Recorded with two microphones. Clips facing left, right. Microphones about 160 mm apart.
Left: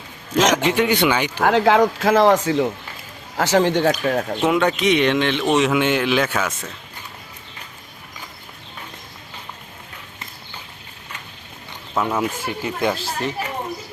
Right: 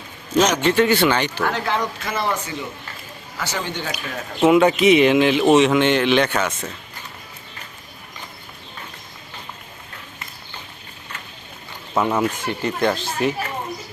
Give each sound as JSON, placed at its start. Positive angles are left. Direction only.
{"t": 0.3, "sound": "speech", "side_deg": 90}
{"t": 0.6, "sound": "speech", "side_deg": 10}
{"t": 1.5, "sound": "speech", "side_deg": 90}
{"t": 4.0, "sound": "speech", "side_deg": 60}
{"t": 4.4, "sound": "speech", "side_deg": -5}
{"t": 11.9, "sound": "speech", "side_deg": 0}